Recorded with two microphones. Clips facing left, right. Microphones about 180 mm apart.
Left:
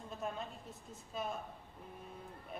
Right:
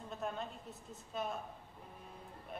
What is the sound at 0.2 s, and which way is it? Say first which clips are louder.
A woman's voice: right 1 dB; centre (ahead or behind).